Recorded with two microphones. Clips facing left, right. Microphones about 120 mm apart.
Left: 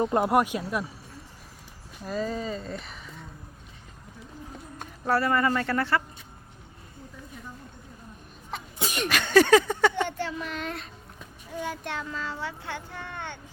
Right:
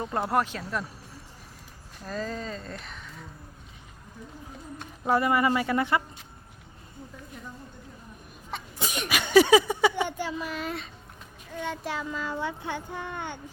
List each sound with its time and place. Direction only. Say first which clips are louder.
0.0 s speech: left 4 dB; 20° left (ahead or behind)
2.0 s speech: left 3 dB; 5° left (ahead or behind)
5.0 s speech: right 1 dB; 15° right (ahead or behind)
8.5 s sneeze: even; centre (ahead or behind)
9.0 s speech: right 1 dB; 10° right (ahead or behind)
11.5 s a child's voice: even; 5° left (ahead or behind)
11.8 s speech: right 2 dB; 5° right (ahead or behind)